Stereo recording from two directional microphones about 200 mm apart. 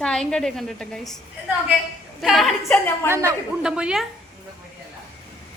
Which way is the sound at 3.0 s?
10° right (ahead or behind).